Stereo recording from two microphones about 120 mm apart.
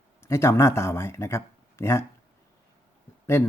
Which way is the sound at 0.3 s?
25° left (ahead or behind).